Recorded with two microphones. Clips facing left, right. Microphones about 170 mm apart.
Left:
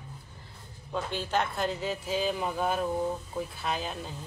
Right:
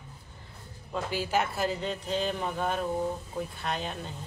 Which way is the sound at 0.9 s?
5° right (ahead or behind).